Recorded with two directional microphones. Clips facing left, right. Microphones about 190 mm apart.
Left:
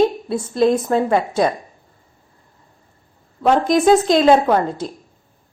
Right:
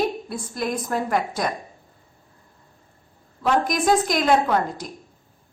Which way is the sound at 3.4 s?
25° left (ahead or behind).